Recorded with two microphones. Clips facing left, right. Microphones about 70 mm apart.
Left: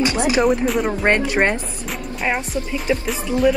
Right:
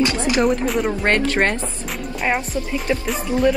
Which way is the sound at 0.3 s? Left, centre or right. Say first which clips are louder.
Left 2 dB; centre.